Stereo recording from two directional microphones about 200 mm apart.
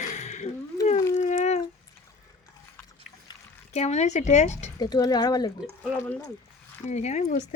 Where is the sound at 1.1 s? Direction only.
40° left (ahead or behind).